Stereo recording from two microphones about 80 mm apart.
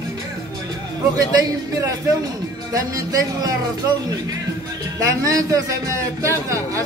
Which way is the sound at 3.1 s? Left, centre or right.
Right.